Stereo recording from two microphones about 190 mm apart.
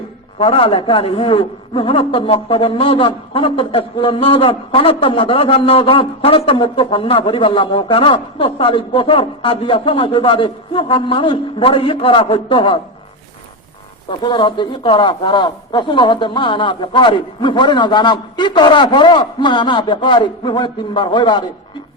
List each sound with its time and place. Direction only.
0.3 s a man's voice: 30° left (ahead or behind)
14.1 s a man's voice: 25° left (ahead or behind)